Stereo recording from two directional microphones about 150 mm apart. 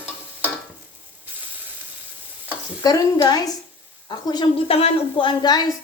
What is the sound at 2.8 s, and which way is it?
Speech, 25° left (ahead or behind).